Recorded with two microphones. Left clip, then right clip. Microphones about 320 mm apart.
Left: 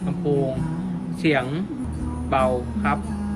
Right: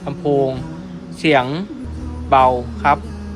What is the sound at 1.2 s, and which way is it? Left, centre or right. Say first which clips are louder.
Speech: right 7 dB; centre.